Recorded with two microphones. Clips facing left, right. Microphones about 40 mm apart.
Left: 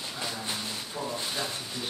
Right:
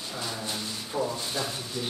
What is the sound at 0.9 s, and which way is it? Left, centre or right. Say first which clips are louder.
Speech: right 4 dB; centre.